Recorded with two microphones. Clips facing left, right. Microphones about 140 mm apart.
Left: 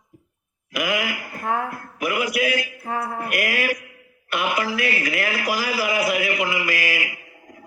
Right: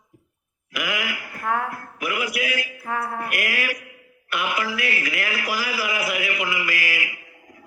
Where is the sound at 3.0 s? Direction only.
20° left (ahead or behind).